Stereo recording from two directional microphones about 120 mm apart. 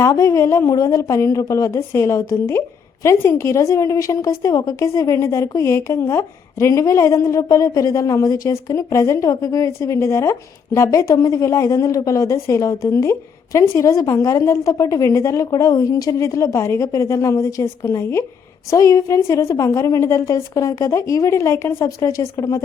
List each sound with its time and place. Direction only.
0.0 s a woman's voice: 25° left (ahead or behind)